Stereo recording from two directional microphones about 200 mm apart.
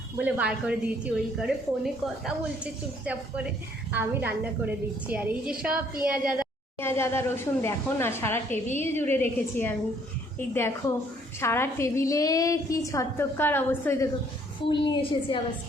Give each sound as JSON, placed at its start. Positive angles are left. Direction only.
{"t": 0.2, "sound": "a woman's voice", "side_deg": -5}
{"t": 6.7, "sound": "a woman's voice", "side_deg": 10}
{"t": 14.7, "sound": "a woman's voice", "side_deg": 25}